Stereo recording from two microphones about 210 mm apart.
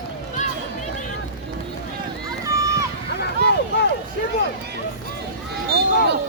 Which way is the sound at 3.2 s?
50° left (ahead or behind).